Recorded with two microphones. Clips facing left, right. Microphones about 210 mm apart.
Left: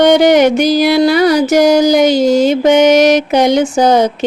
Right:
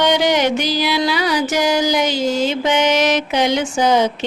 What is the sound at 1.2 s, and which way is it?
Mantra, 40° left (ahead or behind).